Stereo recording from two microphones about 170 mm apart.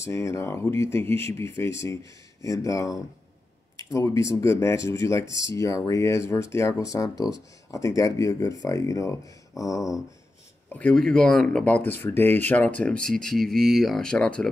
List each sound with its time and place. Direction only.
0.0 s speech: 15° left (ahead or behind)
10.7 s speech: 5° left (ahead or behind)